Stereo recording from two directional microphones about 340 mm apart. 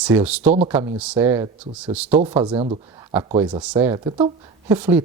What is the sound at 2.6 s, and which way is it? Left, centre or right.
Speech, centre.